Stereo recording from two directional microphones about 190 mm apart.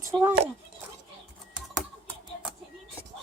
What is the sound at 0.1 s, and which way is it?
Speech, 10° right (ahead or behind).